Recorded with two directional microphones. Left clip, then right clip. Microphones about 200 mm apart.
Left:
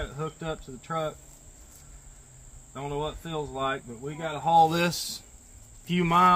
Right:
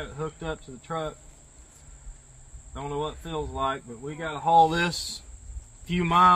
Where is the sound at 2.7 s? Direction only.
30° left (ahead or behind).